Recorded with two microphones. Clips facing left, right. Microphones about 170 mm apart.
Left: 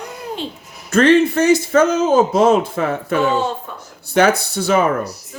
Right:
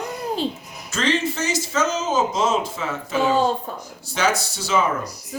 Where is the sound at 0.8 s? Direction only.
55° left (ahead or behind).